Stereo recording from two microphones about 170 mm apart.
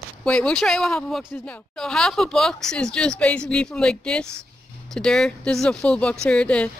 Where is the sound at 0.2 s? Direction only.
5° left (ahead or behind).